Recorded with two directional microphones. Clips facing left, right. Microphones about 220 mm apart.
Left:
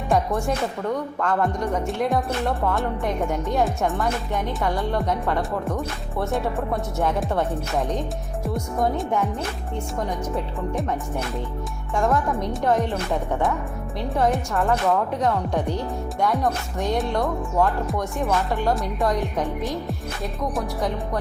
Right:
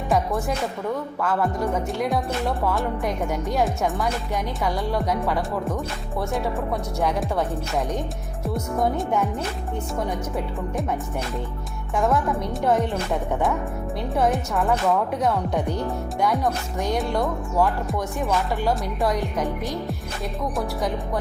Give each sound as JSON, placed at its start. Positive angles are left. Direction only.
{"t": 0.1, "sound": "music", "side_deg": 0}
{"t": 7.0, "sound": "music", "side_deg": 0}
{"t": 8.4, "sound": "music", "side_deg": 0}
{"t": 12.0, "sound": "music", "side_deg": 0}
{"t": 14.2, "sound": "music", "side_deg": 0}